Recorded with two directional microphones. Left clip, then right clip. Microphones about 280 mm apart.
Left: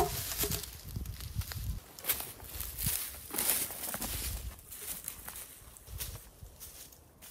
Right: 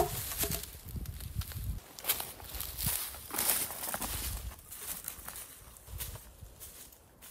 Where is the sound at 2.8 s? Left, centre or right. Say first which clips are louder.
Even; centre.